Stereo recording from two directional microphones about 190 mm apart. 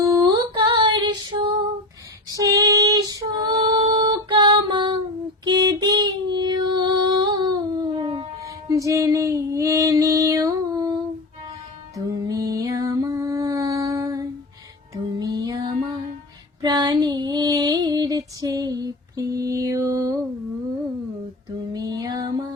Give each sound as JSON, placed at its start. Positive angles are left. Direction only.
{"t": 0.0, "sound": "female singing", "side_deg": -20}
{"t": 5.5, "sound": "music", "side_deg": -20}
{"t": 8.7, "sound": "female singing", "side_deg": -15}
{"t": 11.9, "sound": "music", "side_deg": -20}
{"t": 16.6, "sound": "female singing", "side_deg": -20}
{"t": 21.7, "sound": "music", "side_deg": -20}